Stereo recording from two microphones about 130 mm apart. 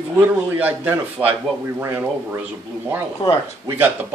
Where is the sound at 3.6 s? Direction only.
15° right (ahead or behind).